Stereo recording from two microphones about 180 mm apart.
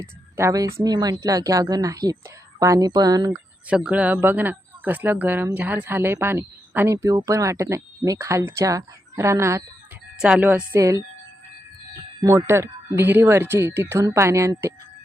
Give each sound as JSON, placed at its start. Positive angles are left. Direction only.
{"t": 0.0, "sound": "a woman's voice", "side_deg": -15}
{"t": 3.7, "sound": "speech", "side_deg": -5}
{"t": 10.2, "sound": "speech", "side_deg": -5}
{"t": 12.2, "sound": "speech", "side_deg": -15}